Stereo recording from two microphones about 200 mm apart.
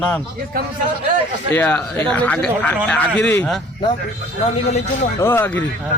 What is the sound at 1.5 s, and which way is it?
Speech, 10° left (ahead or behind).